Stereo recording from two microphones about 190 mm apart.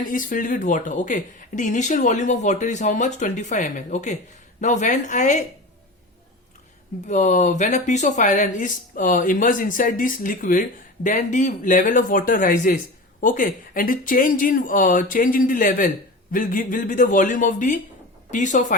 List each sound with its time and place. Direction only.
0.1 s speech: 45° left (ahead or behind)
7.1 s speech: 40° left (ahead or behind)